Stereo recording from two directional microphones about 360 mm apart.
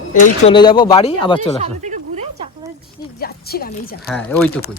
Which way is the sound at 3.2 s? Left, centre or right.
Left.